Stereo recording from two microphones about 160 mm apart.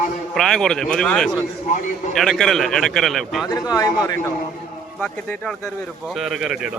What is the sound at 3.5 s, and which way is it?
Speech, 25° left (ahead or behind).